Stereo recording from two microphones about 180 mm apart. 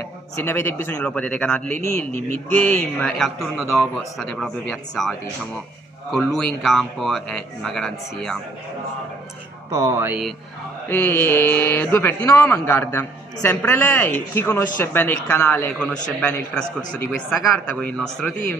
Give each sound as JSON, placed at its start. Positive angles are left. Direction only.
{"t": 0.4, "sound": "a man's voice", "side_deg": 15}
{"t": 6.1, "sound": "a man's voice", "side_deg": 0}
{"t": 9.7, "sound": "speech", "side_deg": -20}
{"t": 10.9, "sound": "speech", "side_deg": 10}
{"t": 17.7, "sound": "a man's voice", "side_deg": 5}